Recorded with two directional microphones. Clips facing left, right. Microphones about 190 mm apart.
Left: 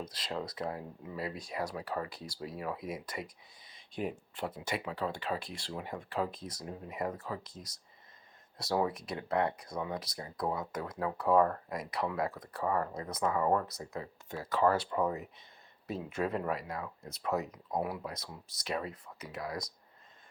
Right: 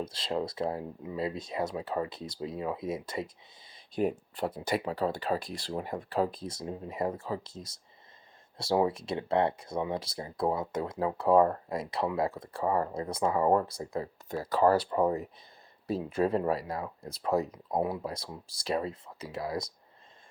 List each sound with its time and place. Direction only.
0.0 s speech: 25° right (ahead or behind)